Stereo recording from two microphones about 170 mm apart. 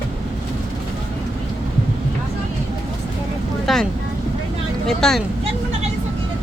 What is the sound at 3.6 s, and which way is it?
Vehicle, centre (ahead or behind).